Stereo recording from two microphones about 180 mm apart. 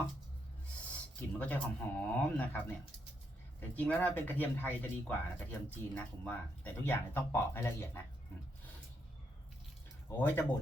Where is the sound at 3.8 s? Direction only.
10° left (ahead or behind).